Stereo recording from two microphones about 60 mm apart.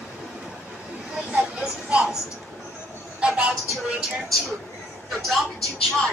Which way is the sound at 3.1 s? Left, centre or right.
Centre.